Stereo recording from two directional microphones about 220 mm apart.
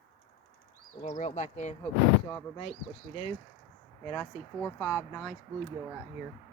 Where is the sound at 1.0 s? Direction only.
30° left (ahead or behind).